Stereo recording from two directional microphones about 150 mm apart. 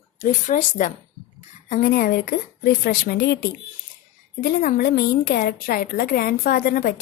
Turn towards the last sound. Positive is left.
turn(degrees=75)  # may be behind; listen again after turning